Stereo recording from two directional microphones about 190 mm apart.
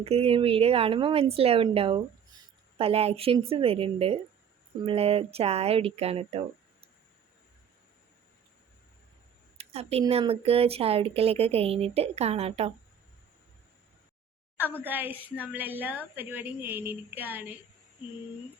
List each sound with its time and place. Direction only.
0.0 s a woman's voice: 30° right (ahead or behind)
9.6 s a sound: 35° right (ahead or behind)
10.1 s speech: 30° right (ahead or behind)
14.8 s a woman's voice: 10° right (ahead or behind)